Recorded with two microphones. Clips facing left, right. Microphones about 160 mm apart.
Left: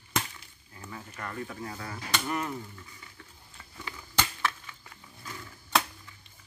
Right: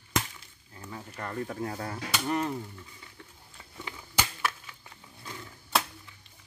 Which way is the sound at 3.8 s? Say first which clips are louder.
Left 1 dB; 10° right (ahead or behind).